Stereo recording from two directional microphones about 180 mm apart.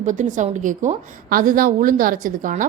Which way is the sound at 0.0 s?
45° right (ahead or behind).